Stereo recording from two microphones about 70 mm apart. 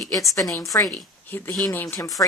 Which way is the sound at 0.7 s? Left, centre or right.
Left.